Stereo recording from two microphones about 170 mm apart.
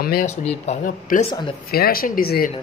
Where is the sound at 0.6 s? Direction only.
50° left (ahead or behind).